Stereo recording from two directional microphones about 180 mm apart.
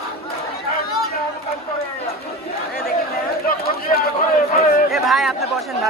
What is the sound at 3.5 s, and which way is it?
Run, 55° left (ahead or behind).